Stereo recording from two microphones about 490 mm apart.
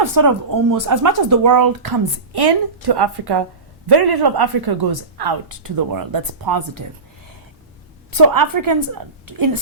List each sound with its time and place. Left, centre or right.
0.0 s speech: right
8.1 s a woman's voice: right